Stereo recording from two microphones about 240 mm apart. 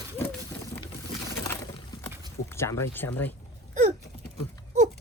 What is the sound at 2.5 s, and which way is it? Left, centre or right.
Speech, centre.